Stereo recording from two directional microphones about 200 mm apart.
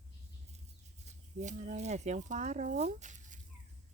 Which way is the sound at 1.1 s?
35° right (ahead or behind).